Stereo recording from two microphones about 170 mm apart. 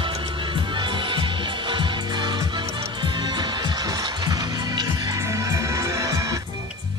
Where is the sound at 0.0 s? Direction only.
30° right (ahead or behind).